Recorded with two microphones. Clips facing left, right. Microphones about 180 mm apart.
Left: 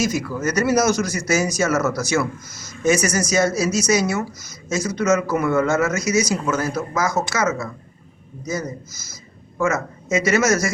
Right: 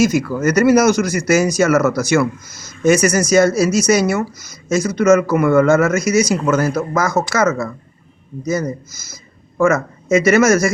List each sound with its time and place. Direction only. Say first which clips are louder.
0.0 s speech: right 7 dB; 60° right (ahead or behind)
9.6 s speech: right 6 dB; 55° right (ahead or behind)